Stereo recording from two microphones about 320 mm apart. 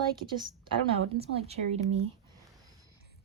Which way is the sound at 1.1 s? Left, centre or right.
Centre.